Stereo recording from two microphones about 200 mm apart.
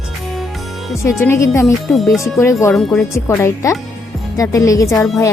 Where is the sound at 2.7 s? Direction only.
5° left (ahead or behind).